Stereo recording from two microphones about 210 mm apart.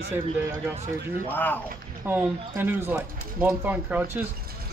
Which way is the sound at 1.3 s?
10° left (ahead or behind).